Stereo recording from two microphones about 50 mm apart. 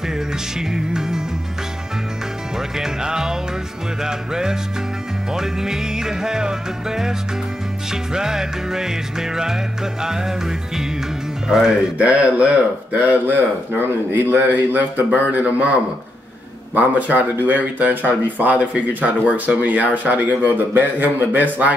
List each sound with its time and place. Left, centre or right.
0.1 s music: centre
2.5 s music: centre
12.0 s speech: right
13.3 s speech: right
15.3 s speech: right
16.7 s speech: right